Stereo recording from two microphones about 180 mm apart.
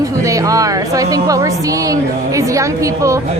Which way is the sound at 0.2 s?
20° right (ahead or behind).